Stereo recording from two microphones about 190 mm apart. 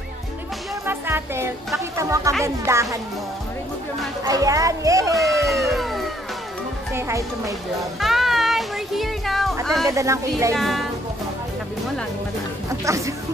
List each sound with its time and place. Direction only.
0.8 s a child's voice: 10° right (ahead or behind)
4.2 s a child's voice: 20° right (ahead or behind)
5.1 s music: centre (ahead or behind)
6.9 s a child's voice: 15° right (ahead or behind)
8.0 s music: centre (ahead or behind)
9.8 s a child's voice: 15° right (ahead or behind)
10.6 s music: centre (ahead or behind)
12.6 s speech: 15° right (ahead or behind)